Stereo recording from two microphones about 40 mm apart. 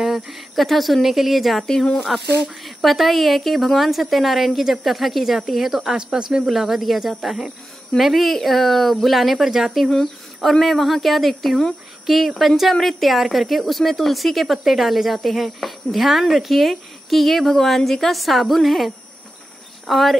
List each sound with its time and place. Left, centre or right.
0.0 s a sound: centre
0.6 s speech: centre
6.1 s speech: right
6.5 s speech: centre